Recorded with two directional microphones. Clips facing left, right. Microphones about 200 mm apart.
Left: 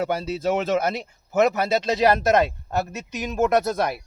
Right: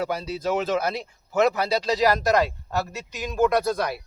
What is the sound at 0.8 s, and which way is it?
Speech, 25° left (ahead or behind).